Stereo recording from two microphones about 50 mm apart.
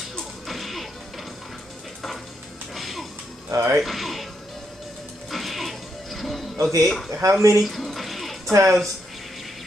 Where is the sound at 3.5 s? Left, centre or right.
Right.